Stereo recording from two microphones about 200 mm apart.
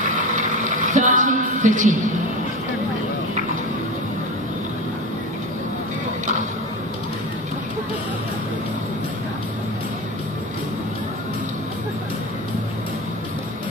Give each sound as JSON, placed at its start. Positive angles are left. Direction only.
{"t": 0.4, "sound": "music", "side_deg": -40}